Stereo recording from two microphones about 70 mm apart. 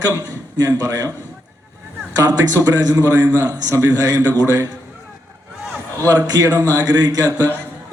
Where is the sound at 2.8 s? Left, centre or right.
Right.